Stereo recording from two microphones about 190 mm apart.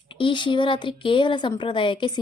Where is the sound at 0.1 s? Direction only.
25° left (ahead or behind).